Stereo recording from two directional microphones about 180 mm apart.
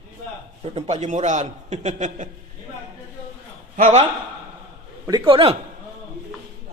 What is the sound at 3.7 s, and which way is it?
Speech, 45° right (ahead or behind).